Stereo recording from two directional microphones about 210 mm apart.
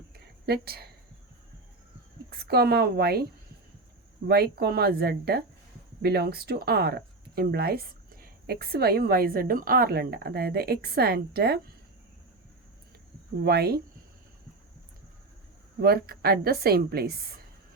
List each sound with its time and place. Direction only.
0.4 s speech: 50° right (ahead or behind)
2.3 s speech: 50° right (ahead or behind)
13.4 s speech: 50° right (ahead or behind)
15.8 s speech: 45° right (ahead or behind)